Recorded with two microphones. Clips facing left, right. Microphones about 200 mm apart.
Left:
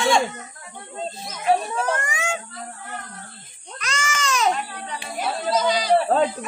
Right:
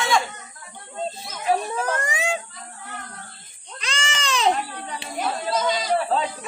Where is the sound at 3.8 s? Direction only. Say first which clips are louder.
Left 2 dB; 30° right (ahead or behind).